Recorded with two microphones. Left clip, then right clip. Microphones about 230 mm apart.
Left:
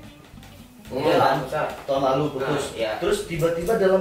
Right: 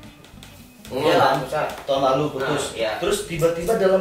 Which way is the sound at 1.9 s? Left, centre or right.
Centre.